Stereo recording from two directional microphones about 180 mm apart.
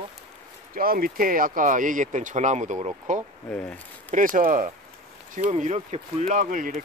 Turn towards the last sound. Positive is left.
turn(degrees=-45)  # may be behind; listen again after turning